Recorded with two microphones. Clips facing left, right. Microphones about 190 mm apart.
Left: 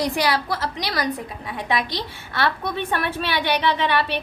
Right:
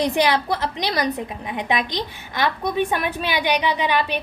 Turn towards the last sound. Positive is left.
turn(degrees=-15)  # may be behind; listen again after turning